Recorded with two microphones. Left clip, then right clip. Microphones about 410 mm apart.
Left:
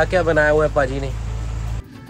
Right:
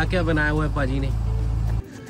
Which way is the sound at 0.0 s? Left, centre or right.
Centre.